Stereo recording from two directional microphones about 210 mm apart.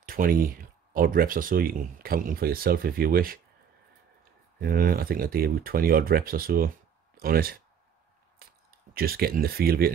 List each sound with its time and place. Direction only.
0.0 s speech: 45° right (ahead or behind)
4.6 s speech: 45° right (ahead or behind)
8.4 s a sound: 45° right (ahead or behind)
8.9 s speech: 45° right (ahead or behind)